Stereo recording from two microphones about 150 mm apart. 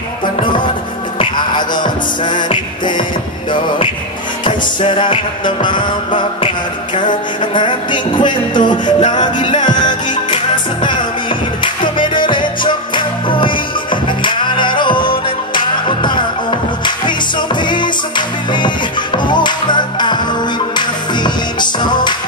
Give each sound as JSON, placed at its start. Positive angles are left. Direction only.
{"t": 1.2, "sound": "music", "side_deg": 30}
{"t": 4.5, "sound": "music", "side_deg": 35}
{"t": 7.5, "sound": "music", "side_deg": 30}